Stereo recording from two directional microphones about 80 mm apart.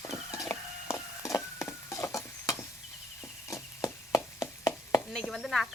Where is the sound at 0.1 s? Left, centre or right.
Left.